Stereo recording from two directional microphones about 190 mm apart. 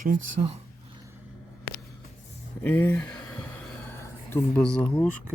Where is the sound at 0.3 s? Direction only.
30° right (ahead or behind).